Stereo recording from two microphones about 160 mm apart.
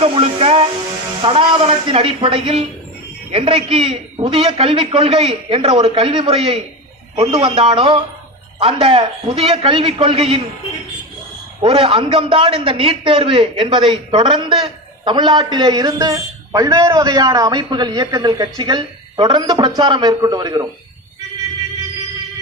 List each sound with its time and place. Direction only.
0.0 s a man's voice: 35° right (ahead or behind)
11.6 s a man's voice: 35° right (ahead or behind)